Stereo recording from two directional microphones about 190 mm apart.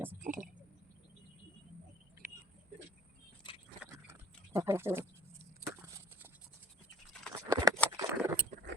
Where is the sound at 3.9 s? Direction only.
15° right (ahead or behind).